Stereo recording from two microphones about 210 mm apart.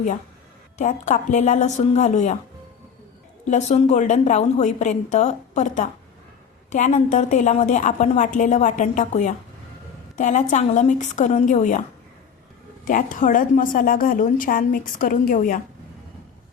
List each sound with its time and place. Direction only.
0.8 s a woman's voice: 35° left (ahead or behind)
3.4 s a woman's voice: 35° left (ahead or behind)